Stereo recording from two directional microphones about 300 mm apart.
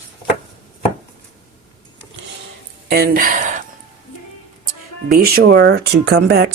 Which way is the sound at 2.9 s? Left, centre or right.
Right.